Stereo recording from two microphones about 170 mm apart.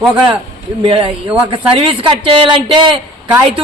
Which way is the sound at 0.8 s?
30° right (ahead or behind).